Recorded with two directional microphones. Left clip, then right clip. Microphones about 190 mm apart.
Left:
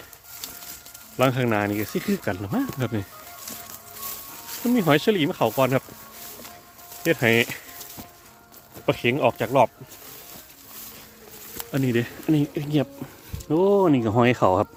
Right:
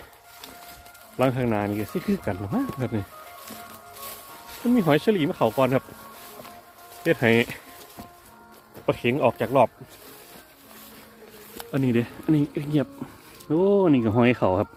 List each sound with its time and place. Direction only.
1.2 s speech: 25° left (ahead or behind)
4.7 s speech: 25° left (ahead or behind)
7.0 s speech: 15° left (ahead or behind)
8.9 s speech: 20° left (ahead or behind)
11.5 s speech: 5° left (ahead or behind)